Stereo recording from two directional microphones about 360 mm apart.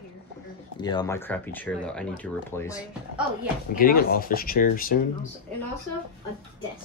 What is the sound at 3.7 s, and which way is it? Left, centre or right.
Speech, left.